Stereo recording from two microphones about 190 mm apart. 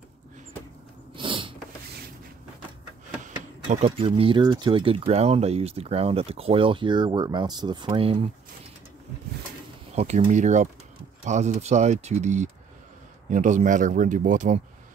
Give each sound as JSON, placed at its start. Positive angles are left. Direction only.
{"t": 1.1, "sound": "a sound", "side_deg": -25}
{"t": 3.7, "sound": "speech", "side_deg": -30}
{"t": 9.9, "sound": "speech", "side_deg": -35}